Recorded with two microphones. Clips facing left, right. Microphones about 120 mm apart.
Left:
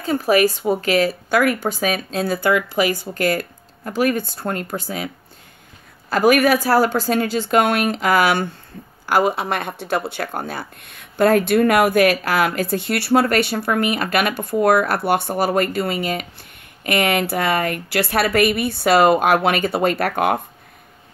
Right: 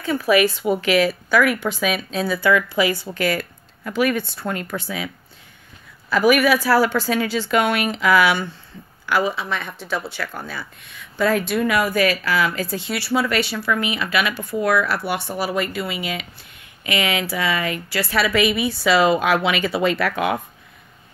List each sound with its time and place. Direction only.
0.0 s a woman's voice: 40° left (ahead or behind)